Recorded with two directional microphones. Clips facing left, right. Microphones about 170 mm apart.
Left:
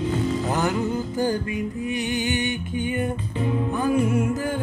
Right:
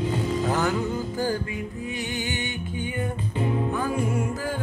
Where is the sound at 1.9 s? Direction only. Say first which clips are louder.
Left 6 dB; 20° left (ahead or behind).